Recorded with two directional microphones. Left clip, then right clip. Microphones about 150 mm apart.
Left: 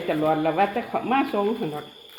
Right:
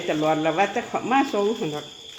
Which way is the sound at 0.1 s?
10° right (ahead or behind).